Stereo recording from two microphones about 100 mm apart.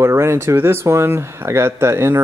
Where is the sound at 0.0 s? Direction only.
25° right (ahead or behind).